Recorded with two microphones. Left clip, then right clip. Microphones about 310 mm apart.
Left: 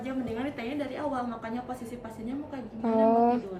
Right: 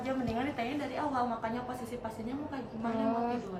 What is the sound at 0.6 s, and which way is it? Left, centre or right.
Speech, centre.